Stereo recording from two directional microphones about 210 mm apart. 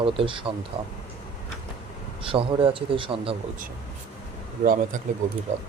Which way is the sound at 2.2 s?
25° right (ahead or behind).